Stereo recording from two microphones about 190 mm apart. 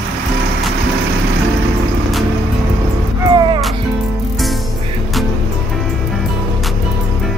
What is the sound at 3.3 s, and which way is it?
Music, 25° right (ahead or behind).